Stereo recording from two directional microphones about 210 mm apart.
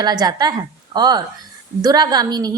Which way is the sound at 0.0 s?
20° right (ahead or behind).